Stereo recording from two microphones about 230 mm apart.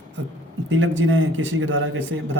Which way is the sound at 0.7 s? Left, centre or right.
Right.